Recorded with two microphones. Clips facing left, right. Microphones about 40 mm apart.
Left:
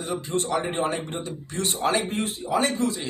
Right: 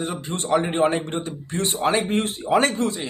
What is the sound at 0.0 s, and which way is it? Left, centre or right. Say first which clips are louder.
Speech: left 1 dB; right.